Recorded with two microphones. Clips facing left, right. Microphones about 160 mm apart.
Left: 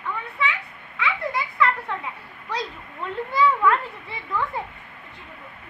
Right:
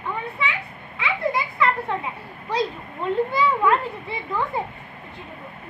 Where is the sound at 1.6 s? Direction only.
25° right (ahead or behind).